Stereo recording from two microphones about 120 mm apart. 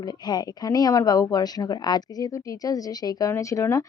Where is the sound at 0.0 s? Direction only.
35° left (ahead or behind).